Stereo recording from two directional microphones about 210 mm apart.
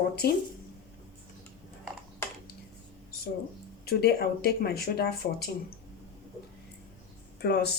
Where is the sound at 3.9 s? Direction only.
50° left (ahead or behind).